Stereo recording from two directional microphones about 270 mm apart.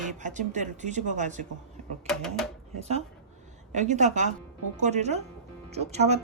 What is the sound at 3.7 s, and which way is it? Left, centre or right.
Speech, right.